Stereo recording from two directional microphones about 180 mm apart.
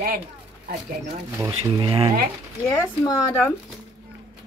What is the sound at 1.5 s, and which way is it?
Speech, 30° right (ahead or behind).